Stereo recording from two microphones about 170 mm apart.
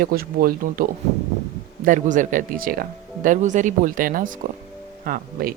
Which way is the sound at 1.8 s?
50° right (ahead or behind).